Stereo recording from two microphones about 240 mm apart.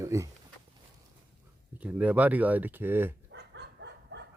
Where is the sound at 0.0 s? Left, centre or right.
Centre.